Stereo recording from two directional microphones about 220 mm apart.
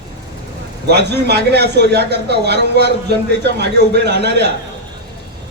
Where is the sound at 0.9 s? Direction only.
50° right (ahead or behind).